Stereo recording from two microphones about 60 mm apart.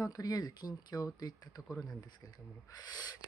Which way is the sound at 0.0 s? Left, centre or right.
Left.